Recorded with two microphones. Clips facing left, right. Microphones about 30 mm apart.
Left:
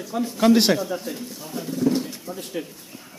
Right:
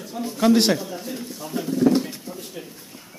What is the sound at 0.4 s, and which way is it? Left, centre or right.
Speech, centre.